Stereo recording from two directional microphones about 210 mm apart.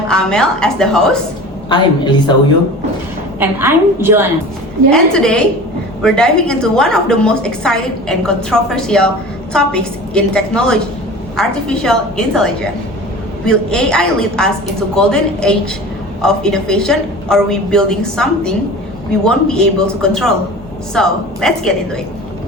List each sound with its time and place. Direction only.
0.1 s a woman's voice: 5° left (ahead or behind)
1.7 s a woman's voice: 20° left (ahead or behind)
3.4 s a woman's voice: 10° right (ahead or behind)
4.9 s a woman's voice: 5° left (ahead or behind)